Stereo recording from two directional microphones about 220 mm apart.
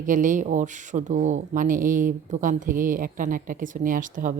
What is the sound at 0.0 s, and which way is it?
Speech, 35° right (ahead or behind).